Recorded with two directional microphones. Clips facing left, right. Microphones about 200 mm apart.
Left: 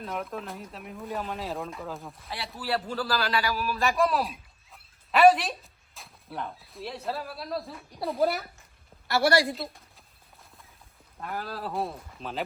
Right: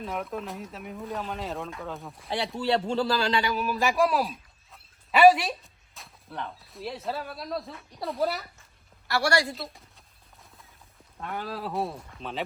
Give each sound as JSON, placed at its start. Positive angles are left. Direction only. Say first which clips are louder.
{"t": 0.0, "sound": "speech", "louder": "right 1 dB", "side_deg": 0}
{"t": 2.6, "sound": "a man's voice", "louder": "right 4 dB", "side_deg": -25}
{"t": 3.8, "sound": "speech", "louder": "right 1 dB", "side_deg": 0}
{"t": 11.2, "sound": "speech", "louder": "right 1 dB", "side_deg": 0}